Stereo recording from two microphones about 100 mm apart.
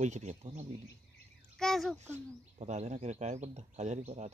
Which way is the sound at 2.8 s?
90° right.